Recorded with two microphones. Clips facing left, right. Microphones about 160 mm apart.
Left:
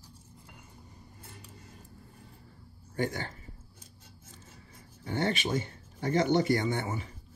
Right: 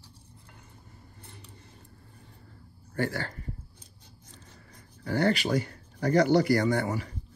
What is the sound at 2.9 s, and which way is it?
Speech, 20° left (ahead or behind).